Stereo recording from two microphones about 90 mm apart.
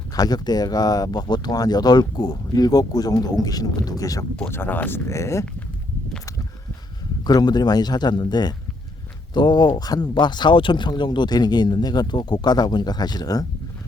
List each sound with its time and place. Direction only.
0.1 s speech: 45° left (ahead or behind)
4.4 s speech: 25° left (ahead or behind)
7.3 s speech: 50° left (ahead or behind)